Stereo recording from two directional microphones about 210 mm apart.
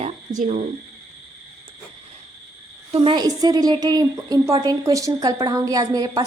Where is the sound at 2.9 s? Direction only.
25° right (ahead or behind).